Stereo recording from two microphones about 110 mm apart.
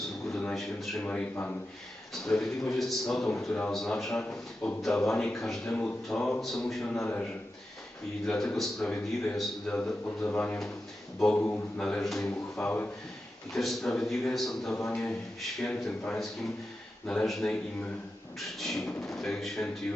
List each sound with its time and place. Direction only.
0.3 s a man's voice: 5° left (ahead or behind)
1.0 s a man's voice: 15° left (ahead or behind)
4.2 s a man's voice: 20° left (ahead or behind)
5.0 s a man's voice: 5° left (ahead or behind)
7.0 s a man's voice: 20° left (ahead or behind)
8.3 s a man's voice: 5° left (ahead or behind)
12.6 s a man's voice: 15° left (ahead or behind)
13.5 s a man's voice: centre (ahead or behind)